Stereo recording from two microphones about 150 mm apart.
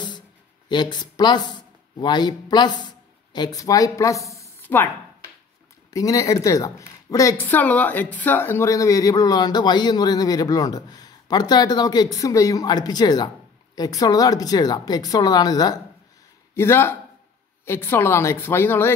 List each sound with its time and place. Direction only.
0.7 s a woman's voice: 30° left (ahead or behind)
16.5 s a woman's voice: 15° left (ahead or behind)